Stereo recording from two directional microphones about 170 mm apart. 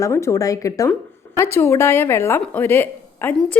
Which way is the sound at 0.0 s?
15° left (ahead or behind).